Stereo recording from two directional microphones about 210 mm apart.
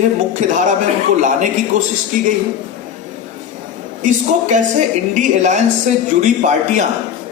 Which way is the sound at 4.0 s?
35° right (ahead or behind).